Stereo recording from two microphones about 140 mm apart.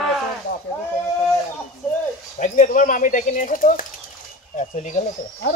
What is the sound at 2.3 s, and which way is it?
Speech, 60° left (ahead or behind).